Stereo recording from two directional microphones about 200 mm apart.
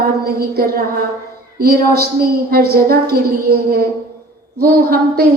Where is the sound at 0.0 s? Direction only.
50° right (ahead or behind).